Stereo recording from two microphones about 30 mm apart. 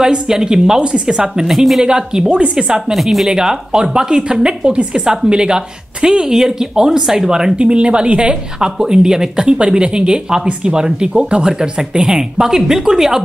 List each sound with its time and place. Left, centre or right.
0.0 s speech: right
1.4 s speech: centre
1.8 s speech: right
2.5 s speech: centre
3.0 s speech: centre
3.3 s speech: right
6.1 s speech: centre
7.5 s speech: right
8.5 s speech: right
11.1 s speech: right; by 13.2 s centre